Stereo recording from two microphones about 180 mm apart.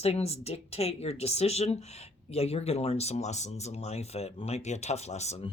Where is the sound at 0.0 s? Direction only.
35° left (ahead or behind).